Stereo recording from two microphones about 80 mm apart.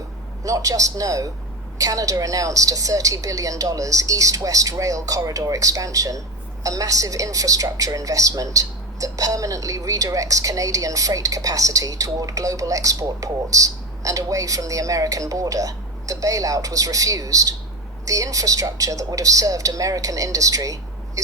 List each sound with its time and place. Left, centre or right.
0.4 s a woman's voice: right